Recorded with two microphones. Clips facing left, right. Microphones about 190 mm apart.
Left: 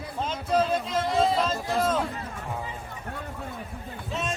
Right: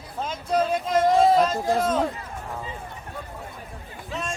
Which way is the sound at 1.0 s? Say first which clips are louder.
Right 6 dB; 45° right (ahead or behind).